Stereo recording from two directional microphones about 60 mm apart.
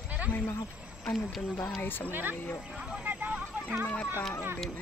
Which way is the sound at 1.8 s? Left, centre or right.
Left.